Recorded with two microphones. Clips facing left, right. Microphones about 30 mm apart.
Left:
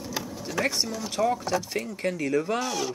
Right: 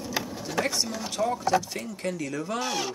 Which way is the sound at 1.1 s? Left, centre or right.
Centre.